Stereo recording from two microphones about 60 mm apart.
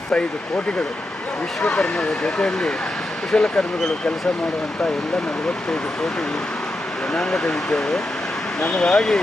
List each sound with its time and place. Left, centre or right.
0.1 s speech: centre
1.6 s speech: centre
7.1 s speech: centre